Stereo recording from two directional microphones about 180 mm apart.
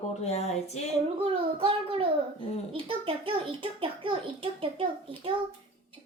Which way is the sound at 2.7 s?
30° right (ahead or behind).